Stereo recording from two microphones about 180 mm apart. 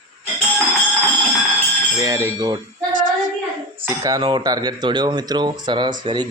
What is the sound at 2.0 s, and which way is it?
Speech, 20° right (ahead or behind).